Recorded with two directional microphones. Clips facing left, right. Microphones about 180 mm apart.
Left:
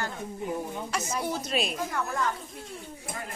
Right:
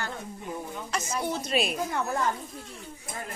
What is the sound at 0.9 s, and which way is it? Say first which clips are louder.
Speech: right 1 dB; 5° left (ahead or behind).